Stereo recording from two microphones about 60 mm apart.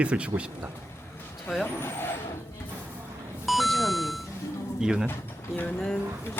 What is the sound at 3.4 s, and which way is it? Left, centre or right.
Beep, centre.